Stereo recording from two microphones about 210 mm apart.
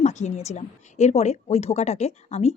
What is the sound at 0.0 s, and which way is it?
Speech, 35° left (ahead or behind).